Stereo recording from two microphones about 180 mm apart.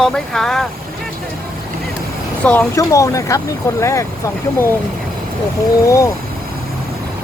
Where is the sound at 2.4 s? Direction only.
10° left (ahead or behind).